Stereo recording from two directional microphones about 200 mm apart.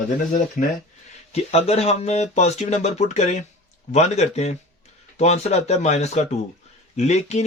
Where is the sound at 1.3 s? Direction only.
30° left (ahead or behind).